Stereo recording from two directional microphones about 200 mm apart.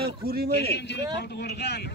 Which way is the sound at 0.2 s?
50° right (ahead or behind).